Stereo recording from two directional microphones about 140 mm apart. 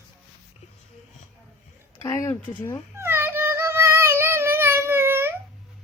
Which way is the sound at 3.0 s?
15° right (ahead or behind).